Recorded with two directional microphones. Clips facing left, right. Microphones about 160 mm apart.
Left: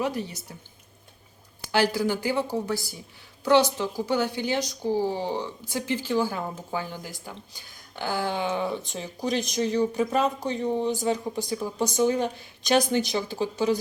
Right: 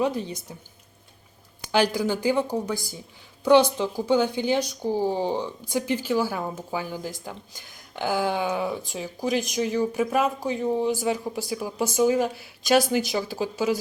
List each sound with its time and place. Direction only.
0.0 s speech: 20° right (ahead or behind)
1.6 s speech: 15° right (ahead or behind)